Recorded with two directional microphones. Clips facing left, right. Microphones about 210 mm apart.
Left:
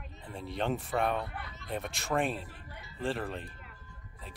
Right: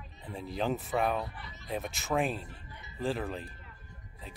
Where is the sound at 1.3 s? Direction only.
55° left (ahead or behind).